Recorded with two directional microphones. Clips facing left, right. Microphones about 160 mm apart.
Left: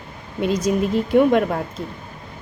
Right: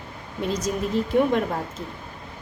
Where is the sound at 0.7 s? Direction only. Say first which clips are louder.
Left 5 dB; 80° left.